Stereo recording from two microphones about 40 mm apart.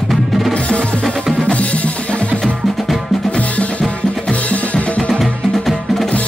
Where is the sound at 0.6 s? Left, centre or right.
Left.